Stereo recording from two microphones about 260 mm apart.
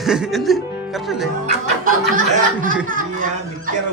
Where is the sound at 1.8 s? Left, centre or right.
Right.